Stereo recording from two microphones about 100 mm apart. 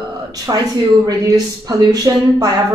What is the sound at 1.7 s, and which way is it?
Speech, 40° right (ahead or behind).